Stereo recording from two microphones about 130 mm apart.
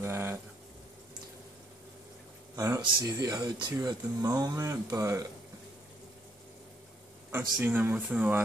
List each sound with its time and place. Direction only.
0.0 s a sound: 20° right (ahead or behind)
2.5 s speech: 25° right (ahead or behind)
3.7 s speech: 20° right (ahead or behind)
7.6 s speech: 15° right (ahead or behind)